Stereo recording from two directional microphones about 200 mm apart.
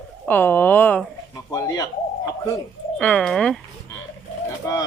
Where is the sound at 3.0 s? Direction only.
5° left (ahead or behind).